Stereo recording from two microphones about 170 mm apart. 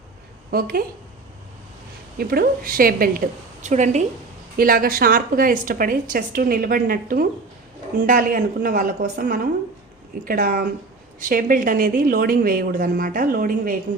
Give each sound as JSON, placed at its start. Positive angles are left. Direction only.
{"t": 0.5, "sound": "a woman's voice", "side_deg": -60}
{"t": 2.1, "sound": "a woman's voice", "side_deg": -60}
{"t": 4.5, "sound": "a woman's voice", "side_deg": -60}